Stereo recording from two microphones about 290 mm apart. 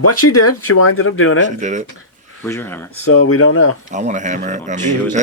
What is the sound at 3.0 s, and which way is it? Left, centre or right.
Speech, left.